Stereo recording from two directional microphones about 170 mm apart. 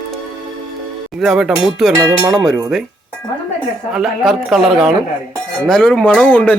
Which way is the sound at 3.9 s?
Centre (ahead or behind).